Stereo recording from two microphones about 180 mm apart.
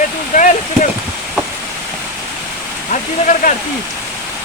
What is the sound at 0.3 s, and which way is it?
Speech, 45° left (ahead or behind).